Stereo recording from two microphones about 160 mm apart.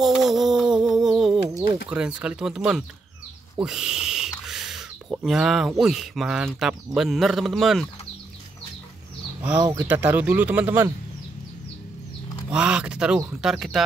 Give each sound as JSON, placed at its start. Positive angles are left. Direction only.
{"t": 0.0, "sound": "a sound", "side_deg": 0}
{"t": 1.9, "sound": "speech", "side_deg": -5}
{"t": 9.6, "sound": "speech", "side_deg": -15}
{"t": 12.4, "sound": "speech", "side_deg": -5}